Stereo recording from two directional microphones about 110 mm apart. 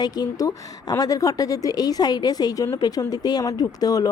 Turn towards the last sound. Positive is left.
turn(degrees=35)  # may be behind; listen again after turning